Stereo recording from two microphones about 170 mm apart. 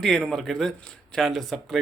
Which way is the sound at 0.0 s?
Centre (ahead or behind).